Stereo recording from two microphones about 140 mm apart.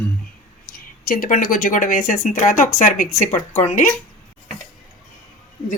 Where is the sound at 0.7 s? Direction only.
90° left; by 3.1 s 65° left (ahead or behind).